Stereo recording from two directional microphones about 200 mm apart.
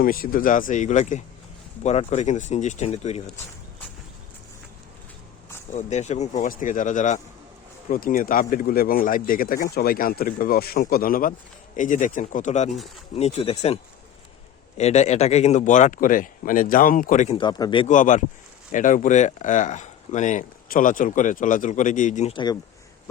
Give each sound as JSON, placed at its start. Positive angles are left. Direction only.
{"t": 0.0, "sound": "speech", "side_deg": 45}
{"t": 5.7, "sound": "speech", "side_deg": 35}
{"t": 14.8, "sound": "speech", "side_deg": 35}
{"t": 17.3, "sound": "speech", "side_deg": 20}
{"t": 17.8, "sound": "speech", "side_deg": 40}